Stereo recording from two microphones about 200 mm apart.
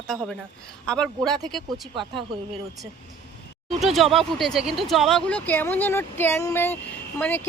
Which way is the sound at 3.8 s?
Centre (ahead or behind).